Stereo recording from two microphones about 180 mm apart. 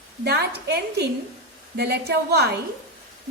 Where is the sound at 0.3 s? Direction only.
65° right (ahead or behind).